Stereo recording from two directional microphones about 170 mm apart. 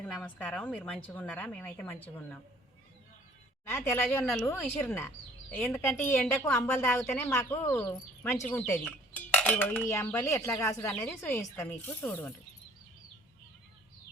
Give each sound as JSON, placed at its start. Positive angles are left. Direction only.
{"t": 0.0, "sound": "a woman's voice", "side_deg": 10}
{"t": 3.7, "sound": "a woman's voice", "side_deg": 15}
{"t": 8.8, "sound": "dishes", "side_deg": 5}
{"t": 10.1, "sound": "a woman's voice", "side_deg": 15}